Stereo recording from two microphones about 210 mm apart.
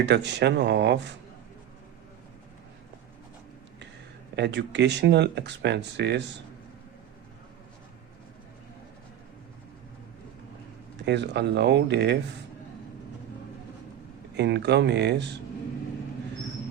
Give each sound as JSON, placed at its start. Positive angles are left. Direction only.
{"t": 0.0, "sound": "speech", "side_deg": -55}
{"t": 4.4, "sound": "speech", "side_deg": -55}
{"t": 11.0, "sound": "speech", "side_deg": -55}
{"t": 14.3, "sound": "speech", "side_deg": -55}